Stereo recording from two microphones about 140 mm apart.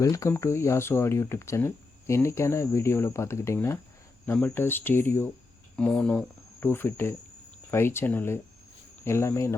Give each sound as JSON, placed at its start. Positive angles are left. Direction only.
{"t": 0.0, "sound": "speech", "side_deg": 20}